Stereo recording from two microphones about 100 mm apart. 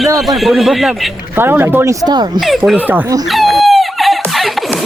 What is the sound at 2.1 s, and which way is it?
Speech, 45° right (ahead or behind).